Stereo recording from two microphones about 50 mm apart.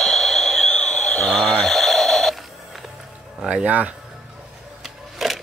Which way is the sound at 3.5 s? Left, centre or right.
Right.